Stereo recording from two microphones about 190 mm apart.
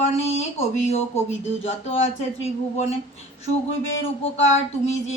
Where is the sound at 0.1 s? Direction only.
35° left (ahead or behind).